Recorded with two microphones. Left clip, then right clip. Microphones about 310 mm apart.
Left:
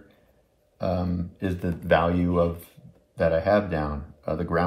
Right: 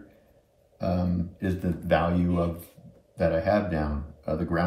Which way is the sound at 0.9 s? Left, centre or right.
Left.